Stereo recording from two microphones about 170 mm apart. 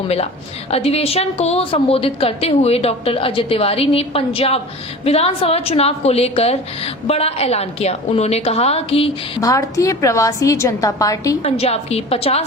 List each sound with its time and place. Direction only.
0.7 s a woman's voice: 35° left (ahead or behind)
9.4 s a woman's voice: 20° left (ahead or behind)
11.5 s a woman's voice: 35° left (ahead or behind)